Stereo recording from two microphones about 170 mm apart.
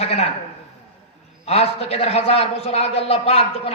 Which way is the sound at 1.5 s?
35° left (ahead or behind).